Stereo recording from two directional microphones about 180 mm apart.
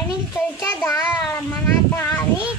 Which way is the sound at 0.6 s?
15° left (ahead or behind).